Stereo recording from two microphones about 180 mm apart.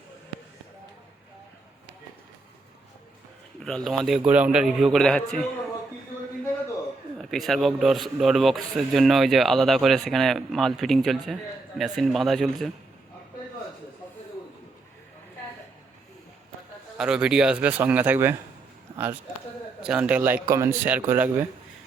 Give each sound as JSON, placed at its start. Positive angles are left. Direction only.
{"t": 3.6, "sound": "a man's voice", "side_deg": 5}
{"t": 7.2, "sound": "a man's voice", "side_deg": 0}
{"t": 17.0, "sound": "a man's voice", "side_deg": -5}
{"t": 18.9, "sound": "a sound", "side_deg": -25}
{"t": 19.8, "sound": "a man's voice", "side_deg": -5}